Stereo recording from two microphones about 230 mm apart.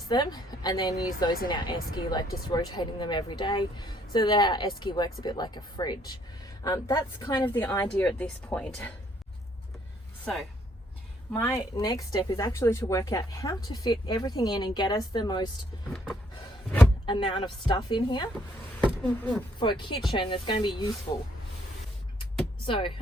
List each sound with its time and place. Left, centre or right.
0.1 s speech: centre
11.3 s speech: centre
17.1 s speech: left
19.0 s speech: centre
19.5 s speech: left
22.6 s speech: left